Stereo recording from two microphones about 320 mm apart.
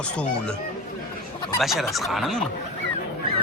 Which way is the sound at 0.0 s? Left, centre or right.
Centre.